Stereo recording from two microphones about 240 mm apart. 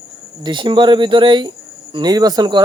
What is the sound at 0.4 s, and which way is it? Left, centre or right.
Speech, centre.